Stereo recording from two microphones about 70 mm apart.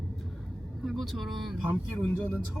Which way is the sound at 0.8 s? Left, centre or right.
Centre.